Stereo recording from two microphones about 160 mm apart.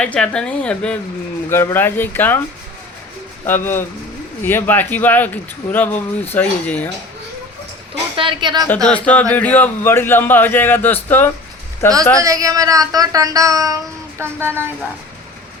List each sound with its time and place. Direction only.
0.0 s speech: 5° left (ahead or behind)
3.4 s speech: 15° left (ahead or behind)
8.1 s speech: 30° right (ahead or behind)
8.7 s speech: 10° left (ahead or behind)
12.2 s speech: 20° right (ahead or behind)